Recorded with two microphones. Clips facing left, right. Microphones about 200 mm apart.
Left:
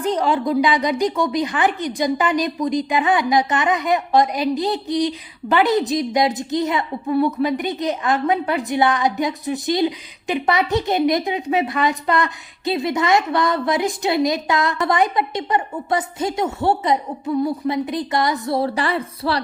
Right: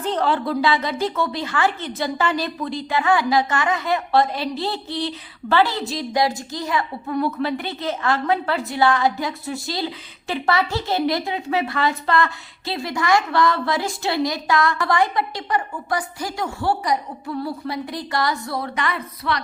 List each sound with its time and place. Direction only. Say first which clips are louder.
0.0 s a woman's voice: left 2 dB; 10° left (ahead or behind); by 19.4 s 30° left (ahead or behind)